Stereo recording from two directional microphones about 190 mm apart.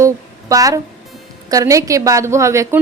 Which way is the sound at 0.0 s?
15° right (ahead or behind).